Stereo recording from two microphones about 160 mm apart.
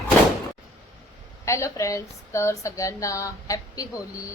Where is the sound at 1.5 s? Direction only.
20° left (ahead or behind).